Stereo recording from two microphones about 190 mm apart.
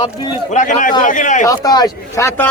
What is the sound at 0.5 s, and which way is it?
Speech, 40° left (ahead or behind).